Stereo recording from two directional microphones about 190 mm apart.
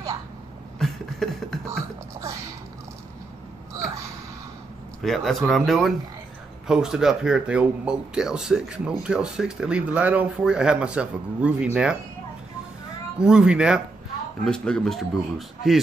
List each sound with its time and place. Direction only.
0.7 s beatboxing: centre (ahead or behind)
1.7 s music: 15° right (ahead or behind)
5.0 s speech: centre (ahead or behind)
13.2 s speech: 5° right (ahead or behind)